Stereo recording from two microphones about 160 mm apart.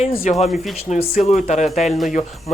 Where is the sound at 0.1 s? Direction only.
65° left (ahead or behind).